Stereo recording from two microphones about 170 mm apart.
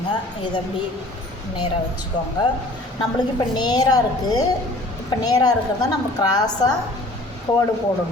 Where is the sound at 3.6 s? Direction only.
25° left (ahead or behind).